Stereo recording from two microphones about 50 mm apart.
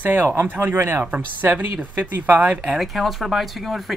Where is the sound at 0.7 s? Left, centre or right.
Right.